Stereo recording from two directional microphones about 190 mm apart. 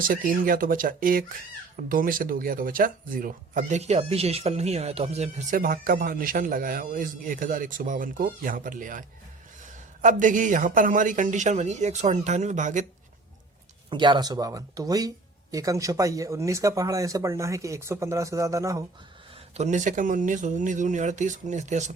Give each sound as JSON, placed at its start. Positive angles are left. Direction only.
{"t": 0.1, "sound": "speech", "side_deg": -45}
{"t": 5.5, "sound": "a man's voice", "side_deg": -50}
{"t": 13.9, "sound": "speech", "side_deg": -25}
{"t": 19.5, "sound": "a man's voice", "side_deg": -40}